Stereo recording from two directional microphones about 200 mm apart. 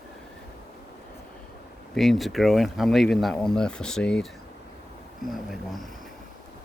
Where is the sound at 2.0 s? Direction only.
Centre (ahead or behind).